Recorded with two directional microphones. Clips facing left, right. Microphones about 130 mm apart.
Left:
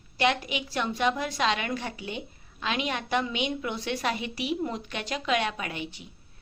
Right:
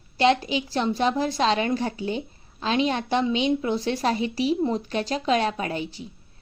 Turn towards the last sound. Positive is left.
turn(degrees=-35)  # may be behind; listen again after turning